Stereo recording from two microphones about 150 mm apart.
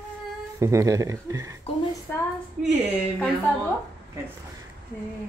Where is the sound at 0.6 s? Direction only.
20° right (ahead or behind).